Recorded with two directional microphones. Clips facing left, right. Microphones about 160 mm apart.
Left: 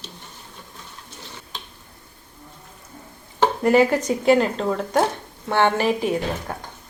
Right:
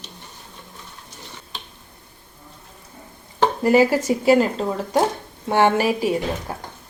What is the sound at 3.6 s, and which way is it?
A woman's voice, centre (ahead or behind).